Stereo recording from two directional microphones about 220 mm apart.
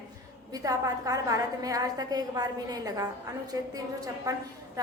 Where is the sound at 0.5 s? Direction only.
15° right (ahead or behind).